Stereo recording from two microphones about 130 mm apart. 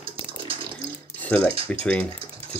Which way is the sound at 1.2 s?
10° left (ahead or behind).